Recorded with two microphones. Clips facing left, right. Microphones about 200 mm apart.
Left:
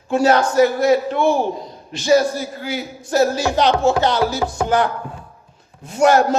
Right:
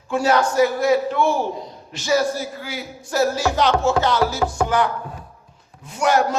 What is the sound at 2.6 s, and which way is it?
Speech, 20° left (ahead or behind).